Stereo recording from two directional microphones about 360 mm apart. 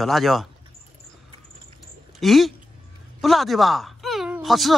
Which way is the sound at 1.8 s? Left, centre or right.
Centre.